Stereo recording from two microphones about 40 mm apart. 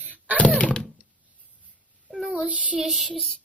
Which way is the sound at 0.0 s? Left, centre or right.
Right.